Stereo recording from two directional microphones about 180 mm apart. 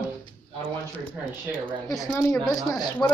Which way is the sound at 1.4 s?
5° left (ahead or behind).